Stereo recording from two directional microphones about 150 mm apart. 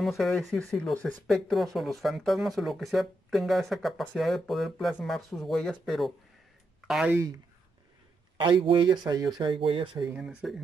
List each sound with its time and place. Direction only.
0.0 s speech: centre (ahead or behind)
8.4 s speech: 35° right (ahead or behind)
10.0 s speech: 5° right (ahead or behind)